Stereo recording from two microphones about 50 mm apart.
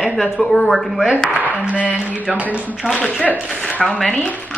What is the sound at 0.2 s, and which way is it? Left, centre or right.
Speech, centre.